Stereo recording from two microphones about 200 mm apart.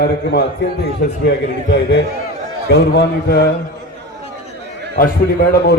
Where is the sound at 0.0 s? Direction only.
55° left (ahead or behind).